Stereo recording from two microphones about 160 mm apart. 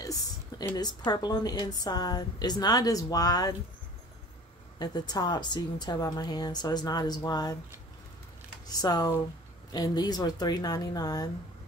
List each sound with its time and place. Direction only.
0.0 s a sound: 20° left (ahead or behind)
0.7 s a woman's voice: 25° left (ahead or behind)
4.7 s a woman's voice: 25° left (ahead or behind)
8.6 s a woman's voice: 25° left (ahead or behind)